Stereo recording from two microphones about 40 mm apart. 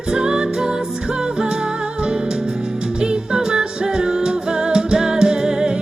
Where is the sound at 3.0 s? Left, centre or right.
Centre.